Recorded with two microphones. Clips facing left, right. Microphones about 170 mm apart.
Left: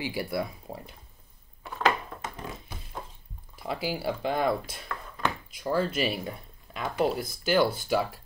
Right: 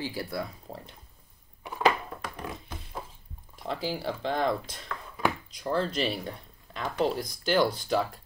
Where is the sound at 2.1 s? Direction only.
20° left (ahead or behind).